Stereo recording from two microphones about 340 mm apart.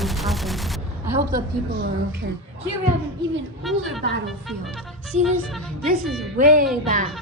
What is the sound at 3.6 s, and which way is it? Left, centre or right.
Speech, centre.